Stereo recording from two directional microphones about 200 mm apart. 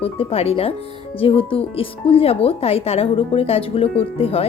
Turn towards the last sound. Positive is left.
turn(degrees=30)  # may be behind; listen again after turning